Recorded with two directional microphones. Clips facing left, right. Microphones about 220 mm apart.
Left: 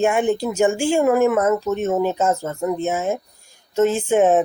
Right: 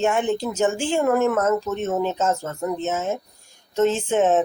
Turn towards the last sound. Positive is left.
turn(degrees=10)  # may be behind; listen again after turning